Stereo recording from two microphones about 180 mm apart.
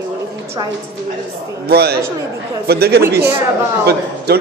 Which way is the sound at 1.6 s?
60° right (ahead or behind).